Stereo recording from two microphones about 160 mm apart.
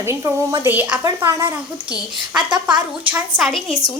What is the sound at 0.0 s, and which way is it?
A woman's voice, 15° right (ahead or behind).